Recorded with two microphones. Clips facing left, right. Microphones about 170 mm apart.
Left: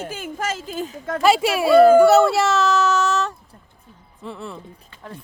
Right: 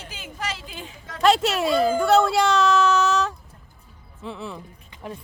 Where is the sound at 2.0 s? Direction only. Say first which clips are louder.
Left 5 dB; 5° left (ahead or behind).